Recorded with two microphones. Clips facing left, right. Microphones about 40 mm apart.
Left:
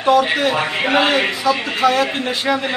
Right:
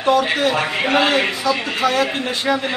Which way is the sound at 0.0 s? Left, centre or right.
Centre.